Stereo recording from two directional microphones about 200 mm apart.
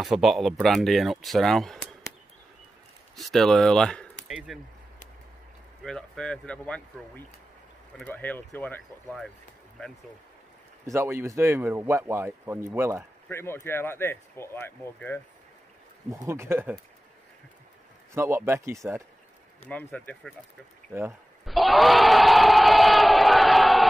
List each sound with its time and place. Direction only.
0.0 s speech: centre (ahead or behind)
3.2 s speech: centre (ahead or behind)
5.9 s speech: 5° left (ahead or behind)
10.9 s speech: 10° right (ahead or behind)
13.3 s speech: 10° left (ahead or behind)
16.1 s speech: 10° right (ahead or behind)
18.1 s speech: 15° right (ahead or behind)
19.7 s speech: 10° left (ahead or behind)
21.5 s crowd: centre (ahead or behind)